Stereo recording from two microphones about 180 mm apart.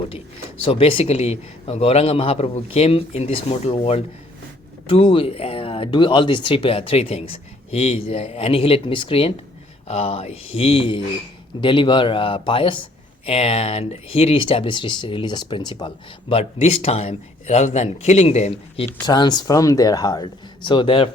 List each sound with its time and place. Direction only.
0.6 s a man's voice: 30° left (ahead or behind)
19.0 s speech: 25° left (ahead or behind)